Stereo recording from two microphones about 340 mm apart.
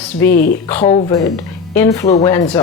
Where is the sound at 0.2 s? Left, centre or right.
Left.